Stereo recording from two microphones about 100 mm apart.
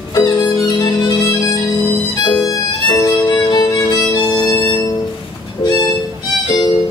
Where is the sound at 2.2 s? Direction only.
40° left (ahead or behind).